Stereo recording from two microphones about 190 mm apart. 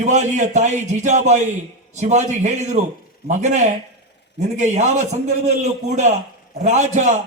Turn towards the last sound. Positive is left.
turn(degrees=-40)  # may be behind; listen again after turning